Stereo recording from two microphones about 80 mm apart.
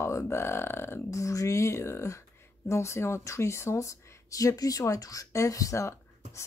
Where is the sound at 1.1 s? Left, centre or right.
Left.